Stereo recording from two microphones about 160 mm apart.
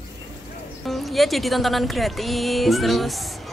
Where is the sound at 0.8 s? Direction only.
Centre (ahead or behind).